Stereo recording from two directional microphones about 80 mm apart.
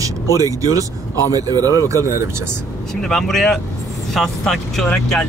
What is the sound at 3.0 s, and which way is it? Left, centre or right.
Speech, centre.